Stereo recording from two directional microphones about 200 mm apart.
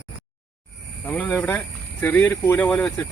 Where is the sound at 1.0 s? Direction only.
10° left (ahead or behind).